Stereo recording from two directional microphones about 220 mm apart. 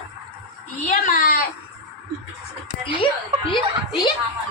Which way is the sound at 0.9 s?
40° left (ahead or behind).